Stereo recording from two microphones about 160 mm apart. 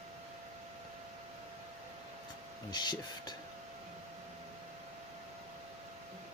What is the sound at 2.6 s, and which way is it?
Speech, 25° left (ahead or behind).